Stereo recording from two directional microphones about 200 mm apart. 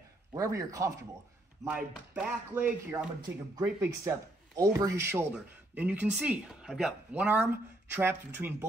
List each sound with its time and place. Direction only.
0.3 s speech: 15° right (ahead or behind)